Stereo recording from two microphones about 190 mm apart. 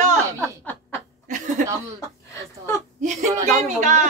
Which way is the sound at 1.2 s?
40° right (ahead or behind).